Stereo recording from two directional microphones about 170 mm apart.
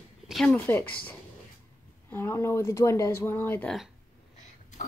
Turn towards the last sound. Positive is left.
turn(degrees=10)  # may be behind; listen again after turning